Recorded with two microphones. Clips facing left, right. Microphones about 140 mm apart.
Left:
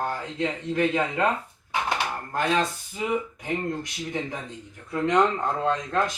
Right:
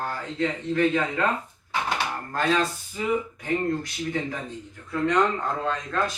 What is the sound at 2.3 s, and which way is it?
Speech, 20° left (ahead or behind).